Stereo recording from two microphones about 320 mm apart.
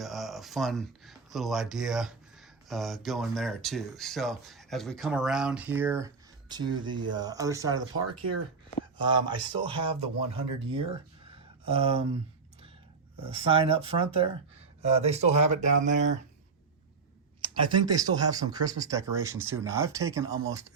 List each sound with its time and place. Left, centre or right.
0.0 s speech: centre
9.0 s speech: centre
13.3 s speech: centre
17.4 s speech: centre